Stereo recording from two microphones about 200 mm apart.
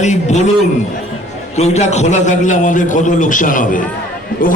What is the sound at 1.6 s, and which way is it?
A man's voice, 35° left (ahead or behind).